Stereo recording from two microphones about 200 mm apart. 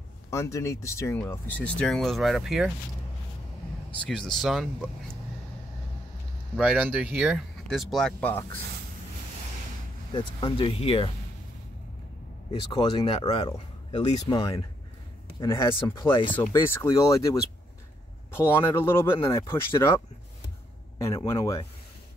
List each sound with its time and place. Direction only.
0.3 s speech: 15° left (ahead or behind); by 2.7 s centre (ahead or behind)
4.0 s speech: 5° left (ahead or behind)
6.5 s speech: 5° right (ahead or behind)
10.1 s speech: 25° left (ahead or behind)
12.7 s speech: 25° left (ahead or behind)
14.4 s speech: 20° left (ahead or behind)
16.5 s speech: 15° left (ahead or behind)
21.3 s speech: 15° left (ahead or behind)